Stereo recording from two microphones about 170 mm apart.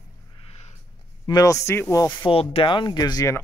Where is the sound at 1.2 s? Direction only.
20° left (ahead or behind).